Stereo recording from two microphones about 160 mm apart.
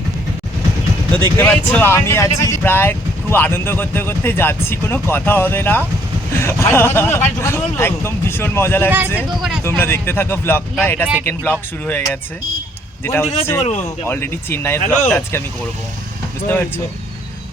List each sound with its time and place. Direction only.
1.4 s speech: 15° left (ahead or behind)
13.1 s speech: 15° left (ahead or behind)
13.6 s speech: 45° left (ahead or behind)
14.1 s speech: 15° left (ahead or behind)
16.5 s speech: 15° left (ahead or behind)